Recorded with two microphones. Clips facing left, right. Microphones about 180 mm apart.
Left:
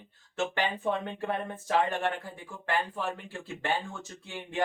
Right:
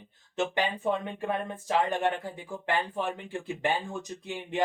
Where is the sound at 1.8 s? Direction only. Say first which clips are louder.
Right 3 dB; 15° right (ahead or behind).